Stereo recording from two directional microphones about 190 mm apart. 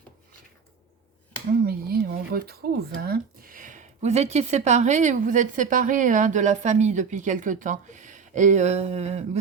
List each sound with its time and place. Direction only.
1.6 s speech: 55° right (ahead or behind); by 9.4 s 35° right (ahead or behind)